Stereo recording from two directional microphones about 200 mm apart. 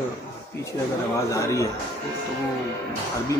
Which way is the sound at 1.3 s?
15° left (ahead or behind).